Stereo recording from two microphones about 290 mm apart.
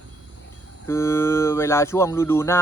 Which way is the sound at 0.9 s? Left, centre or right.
Centre.